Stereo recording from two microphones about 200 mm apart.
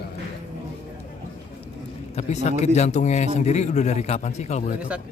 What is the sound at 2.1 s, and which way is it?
Speech, 35° left (ahead or behind).